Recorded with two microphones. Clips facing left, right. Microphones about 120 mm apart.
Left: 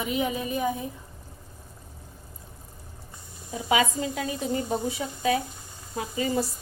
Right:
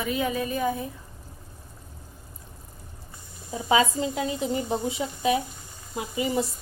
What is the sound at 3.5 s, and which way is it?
Speech, 30° right (ahead or behind).